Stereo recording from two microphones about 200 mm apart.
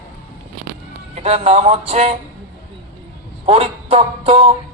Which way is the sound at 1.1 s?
30° right (ahead or behind).